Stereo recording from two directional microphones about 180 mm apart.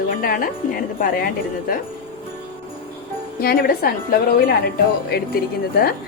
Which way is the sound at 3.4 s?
55° left (ahead or behind).